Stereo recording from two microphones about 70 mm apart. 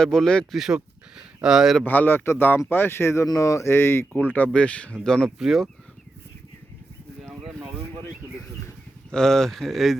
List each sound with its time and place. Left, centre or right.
0.0 s speech: centre
0.5 s speech: centre
1.8 s speech: left
3.2 s speech: left; by 5.3 s centre
5.4 s speech: centre
7.3 s a sound: centre
9.0 s speech: centre